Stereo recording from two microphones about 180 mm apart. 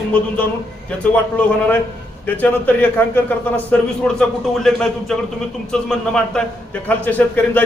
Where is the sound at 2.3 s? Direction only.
10° left (ahead or behind).